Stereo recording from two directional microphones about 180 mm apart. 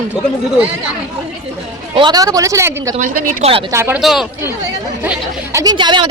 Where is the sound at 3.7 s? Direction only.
15° right (ahead or behind).